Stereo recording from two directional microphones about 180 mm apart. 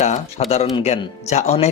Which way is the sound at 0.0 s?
40° left (ahead or behind).